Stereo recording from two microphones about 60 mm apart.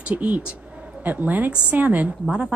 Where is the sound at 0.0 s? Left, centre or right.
Right.